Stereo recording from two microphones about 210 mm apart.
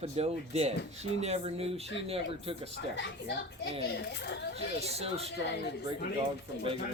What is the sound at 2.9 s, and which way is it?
Speech, 55° left (ahead or behind).